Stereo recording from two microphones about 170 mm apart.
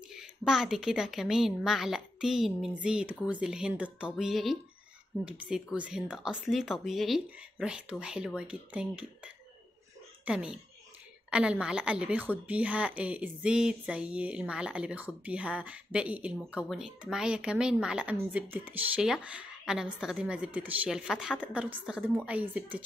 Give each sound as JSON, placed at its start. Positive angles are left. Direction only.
{"t": 0.5, "sound": "speech", "side_deg": -5}